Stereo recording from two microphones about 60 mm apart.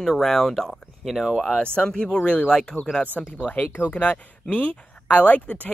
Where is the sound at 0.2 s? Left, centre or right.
Centre.